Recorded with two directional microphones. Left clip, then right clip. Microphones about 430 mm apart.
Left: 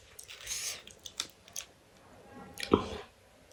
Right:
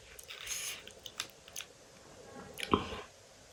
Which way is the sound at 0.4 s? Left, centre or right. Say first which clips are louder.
Left 2 dB; centre.